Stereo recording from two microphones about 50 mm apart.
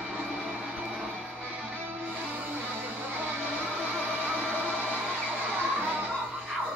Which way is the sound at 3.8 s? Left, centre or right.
Right.